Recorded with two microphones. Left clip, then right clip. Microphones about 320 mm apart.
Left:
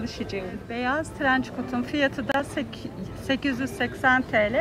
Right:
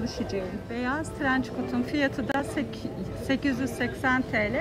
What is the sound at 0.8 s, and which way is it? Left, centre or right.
Speech, left.